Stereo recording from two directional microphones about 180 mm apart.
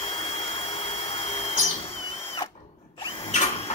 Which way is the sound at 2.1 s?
30° left (ahead or behind).